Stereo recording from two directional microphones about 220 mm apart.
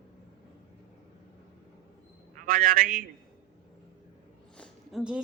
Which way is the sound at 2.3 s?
40° right (ahead or behind).